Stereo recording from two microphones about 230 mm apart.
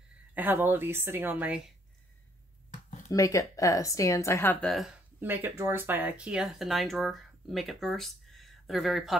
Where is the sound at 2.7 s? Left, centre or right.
Left.